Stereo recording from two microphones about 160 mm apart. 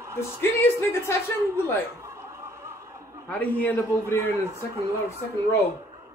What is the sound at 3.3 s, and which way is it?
Speech, 10° left (ahead or behind).